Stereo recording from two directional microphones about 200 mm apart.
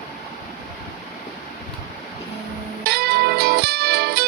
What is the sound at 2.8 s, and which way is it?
Music, 55° right (ahead or behind).